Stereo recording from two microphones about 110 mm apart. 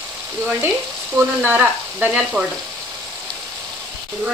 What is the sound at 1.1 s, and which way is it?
Frying, 20° right (ahead or behind).